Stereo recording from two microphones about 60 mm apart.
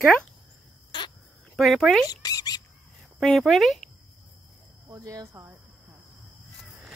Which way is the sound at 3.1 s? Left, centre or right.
Centre.